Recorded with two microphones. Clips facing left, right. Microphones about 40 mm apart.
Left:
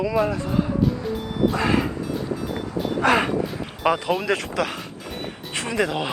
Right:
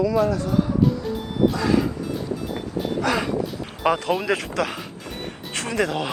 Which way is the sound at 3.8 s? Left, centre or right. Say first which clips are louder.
Even; centre.